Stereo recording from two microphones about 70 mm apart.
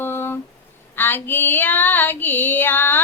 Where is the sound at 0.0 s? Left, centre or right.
Left.